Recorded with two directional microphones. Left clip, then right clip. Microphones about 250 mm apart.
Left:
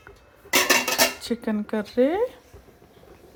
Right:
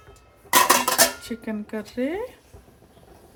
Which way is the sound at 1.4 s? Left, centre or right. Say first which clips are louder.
Left 3 dB; centre.